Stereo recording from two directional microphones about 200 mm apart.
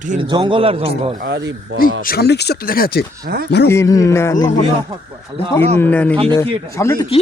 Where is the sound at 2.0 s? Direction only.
50° left (ahead or behind).